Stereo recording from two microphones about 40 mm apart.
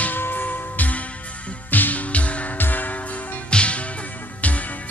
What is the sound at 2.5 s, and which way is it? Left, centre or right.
Music, left.